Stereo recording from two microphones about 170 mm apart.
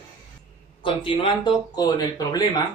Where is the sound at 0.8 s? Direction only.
30° left (ahead or behind).